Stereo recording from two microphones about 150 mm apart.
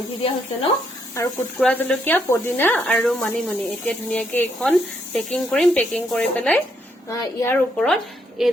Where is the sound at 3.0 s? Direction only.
Centre (ahead or behind).